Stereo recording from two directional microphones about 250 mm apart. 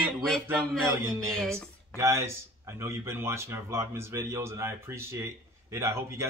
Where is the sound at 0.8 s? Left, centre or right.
Centre.